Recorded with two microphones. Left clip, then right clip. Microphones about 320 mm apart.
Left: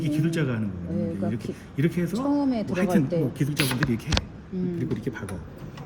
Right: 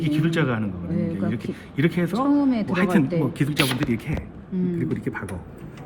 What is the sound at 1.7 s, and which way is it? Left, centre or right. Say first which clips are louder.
Speech: right 4 dB; centre.